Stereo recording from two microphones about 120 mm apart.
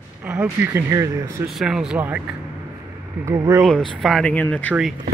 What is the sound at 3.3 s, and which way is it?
Speech, 25° right (ahead or behind).